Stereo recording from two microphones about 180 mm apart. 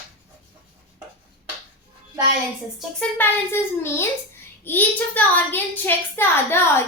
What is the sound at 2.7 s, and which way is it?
A woman's voice, 10° left (ahead or behind).